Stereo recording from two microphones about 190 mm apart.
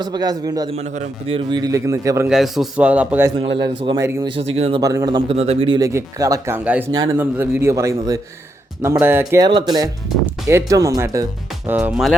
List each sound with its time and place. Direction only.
0.0 s a man's voice: 20° right (ahead or behind)
0.8 s a man's voice: 35° right (ahead or behind); by 2.2 s 15° right (ahead or behind)
2.2 s speech: centre (ahead or behind)
3.8 s a man's voice: 25° right (ahead or behind)
4.0 s speech: 15° right (ahead or behind)
4.5 s speech: 35° right (ahead or behind)
4.8 s speech: 15° right (ahead or behind)